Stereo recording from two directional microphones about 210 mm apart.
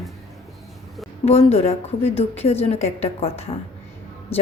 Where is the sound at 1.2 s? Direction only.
30° left (ahead or behind).